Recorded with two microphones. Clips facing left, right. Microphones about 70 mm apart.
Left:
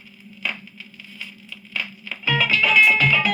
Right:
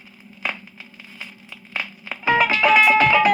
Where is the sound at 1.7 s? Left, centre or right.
Right.